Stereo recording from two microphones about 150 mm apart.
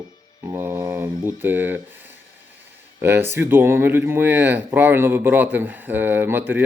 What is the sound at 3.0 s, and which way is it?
Speech, 15° right (ahead or behind).